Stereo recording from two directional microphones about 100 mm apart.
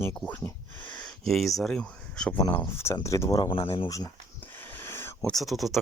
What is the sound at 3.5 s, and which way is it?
Speech, 60° left (ahead or behind).